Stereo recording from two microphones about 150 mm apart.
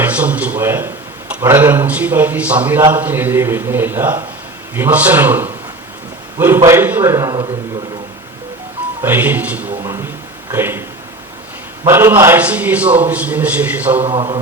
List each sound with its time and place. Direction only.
0.0 s a sound: 10° right (ahead or behind)
1.3 s a man's voice: 15° right (ahead or behind)
9.0 s a man's voice: 10° right (ahead or behind)
9.8 s a sound: 20° right (ahead or behind)
10.5 s a man's voice: 15° right (ahead or behind)
11.9 s a man's voice: 15° right (ahead or behind)
14.0 s a man's voice: 40° right (ahead or behind)